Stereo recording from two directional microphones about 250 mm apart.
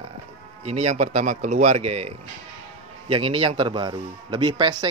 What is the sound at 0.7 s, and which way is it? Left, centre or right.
Speech, right.